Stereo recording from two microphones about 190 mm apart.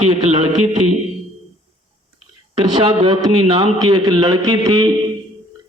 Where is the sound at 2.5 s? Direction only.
30° right (ahead or behind).